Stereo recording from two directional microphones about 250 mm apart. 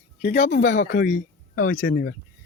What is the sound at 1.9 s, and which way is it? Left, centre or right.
Speech, left.